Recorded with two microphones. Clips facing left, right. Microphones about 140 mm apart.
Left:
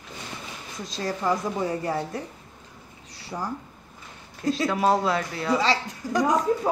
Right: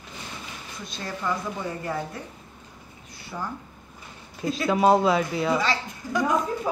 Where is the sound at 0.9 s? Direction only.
35° left (ahead or behind).